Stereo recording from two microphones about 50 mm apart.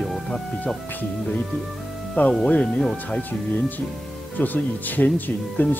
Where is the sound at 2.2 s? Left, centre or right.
Left.